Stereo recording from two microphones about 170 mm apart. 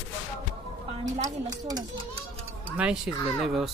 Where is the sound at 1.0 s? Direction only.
20° right (ahead or behind).